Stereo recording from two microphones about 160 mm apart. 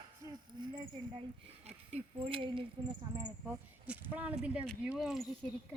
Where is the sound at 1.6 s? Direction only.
40° right (ahead or behind).